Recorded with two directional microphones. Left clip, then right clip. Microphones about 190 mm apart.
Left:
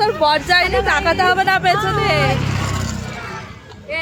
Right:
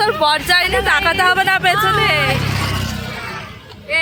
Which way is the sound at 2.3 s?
40° right (ahead or behind).